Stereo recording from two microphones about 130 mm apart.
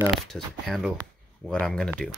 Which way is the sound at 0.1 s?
Centre (ahead or behind).